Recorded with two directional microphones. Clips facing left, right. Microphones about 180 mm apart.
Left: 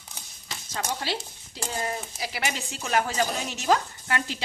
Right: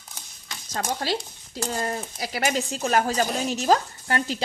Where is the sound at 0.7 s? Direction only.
45° right (ahead or behind).